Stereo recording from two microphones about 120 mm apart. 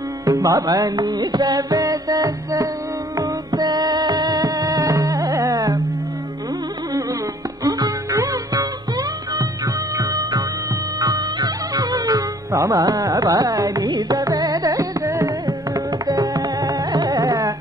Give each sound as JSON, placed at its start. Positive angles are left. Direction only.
{"t": 0.2, "sound": "music", "side_deg": -30}
{"t": 7.6, "sound": "music", "side_deg": -30}
{"t": 9.9, "sound": "music", "side_deg": -35}